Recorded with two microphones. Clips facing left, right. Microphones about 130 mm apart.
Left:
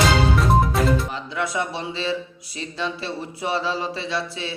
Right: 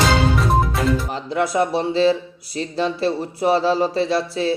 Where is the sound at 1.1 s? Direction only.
40° right (ahead or behind).